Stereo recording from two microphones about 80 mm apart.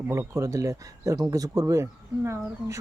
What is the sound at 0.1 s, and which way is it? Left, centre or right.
Speech, right.